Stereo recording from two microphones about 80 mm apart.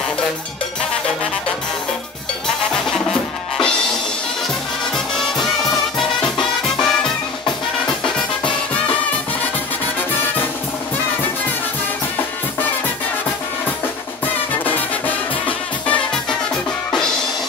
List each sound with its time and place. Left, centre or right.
2.4 s music: centre
4.9 s music: centre
14.2 s music: left